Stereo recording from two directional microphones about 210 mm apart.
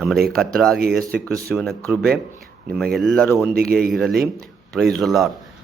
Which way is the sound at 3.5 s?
45° right (ahead or behind).